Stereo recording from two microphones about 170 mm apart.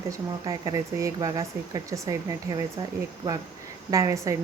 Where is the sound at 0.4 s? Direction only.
20° right (ahead or behind).